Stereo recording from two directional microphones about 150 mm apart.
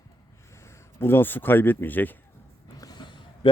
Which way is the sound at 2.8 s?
25° left (ahead or behind).